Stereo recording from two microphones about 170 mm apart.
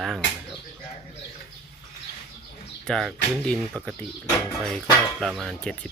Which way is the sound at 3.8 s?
20° right (ahead or behind).